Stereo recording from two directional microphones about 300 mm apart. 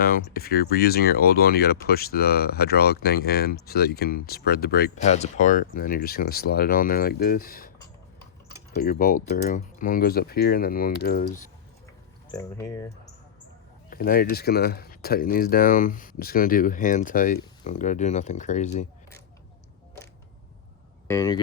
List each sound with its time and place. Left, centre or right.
0.0 s speech: left
8.7 s speech: left
12.3 s speech: centre
13.9 s speech: left
21.1 s speech: centre